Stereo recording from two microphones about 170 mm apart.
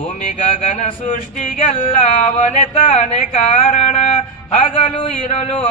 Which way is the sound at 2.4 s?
45° left (ahead or behind).